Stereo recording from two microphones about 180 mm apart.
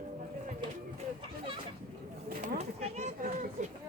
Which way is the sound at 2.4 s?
35° right (ahead or behind).